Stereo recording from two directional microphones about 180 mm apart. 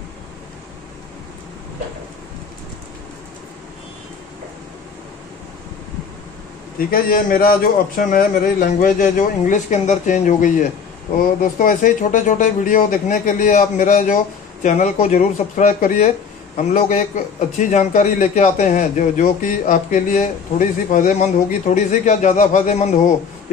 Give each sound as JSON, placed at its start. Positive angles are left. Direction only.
{"t": 6.9, "sound": "a man's voice", "side_deg": 55}